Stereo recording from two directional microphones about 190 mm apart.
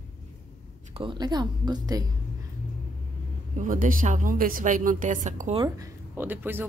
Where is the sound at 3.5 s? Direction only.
45° right (ahead or behind).